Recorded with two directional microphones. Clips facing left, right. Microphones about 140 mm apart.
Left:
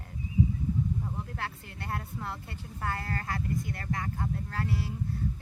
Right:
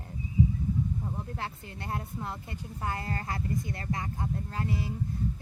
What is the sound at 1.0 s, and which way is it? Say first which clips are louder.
Speech: right 1 dB; 20° right (ahead or behind).